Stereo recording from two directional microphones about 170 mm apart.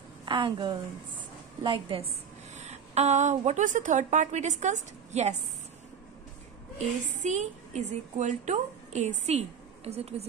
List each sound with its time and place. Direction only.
0.2 s a woman's voice: 30° right (ahead or behind)
7.2 s a woman's voice: 45° right (ahead or behind)